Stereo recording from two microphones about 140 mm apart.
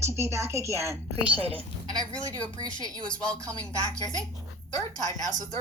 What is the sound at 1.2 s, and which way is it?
Speech, 40° right (ahead or behind).